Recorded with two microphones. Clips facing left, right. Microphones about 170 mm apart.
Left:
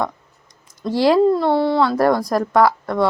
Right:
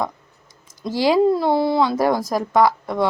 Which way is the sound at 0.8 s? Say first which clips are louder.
Left 2 dB; centre (ahead or behind).